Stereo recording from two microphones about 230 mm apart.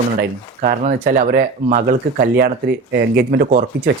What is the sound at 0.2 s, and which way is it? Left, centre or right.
Speech, right.